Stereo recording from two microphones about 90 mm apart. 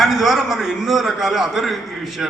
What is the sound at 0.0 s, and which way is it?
A man's voice, 5° right (ahead or behind).